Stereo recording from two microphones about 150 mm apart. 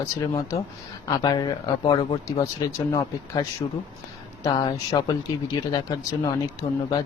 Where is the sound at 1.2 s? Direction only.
30° left (ahead or behind).